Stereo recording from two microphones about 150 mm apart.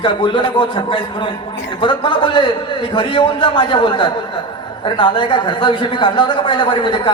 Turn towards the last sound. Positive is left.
turn(degrees=35)  # may be behind; listen again after turning